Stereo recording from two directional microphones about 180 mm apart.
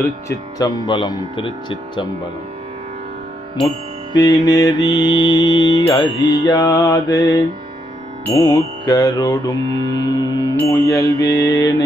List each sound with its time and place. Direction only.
0.6 s mantra: 20° left (ahead or behind)
4.1 s mantra: 20° left (ahead or behind)